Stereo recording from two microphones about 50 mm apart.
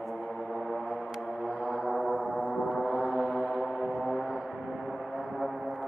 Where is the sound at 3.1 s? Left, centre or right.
Right.